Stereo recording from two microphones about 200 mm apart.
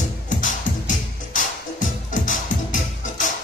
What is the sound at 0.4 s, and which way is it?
Music, 40° left (ahead or behind).